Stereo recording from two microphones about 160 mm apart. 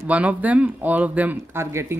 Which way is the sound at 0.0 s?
10° right (ahead or behind).